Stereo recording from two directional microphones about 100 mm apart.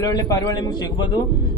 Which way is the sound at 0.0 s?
40° left (ahead or behind).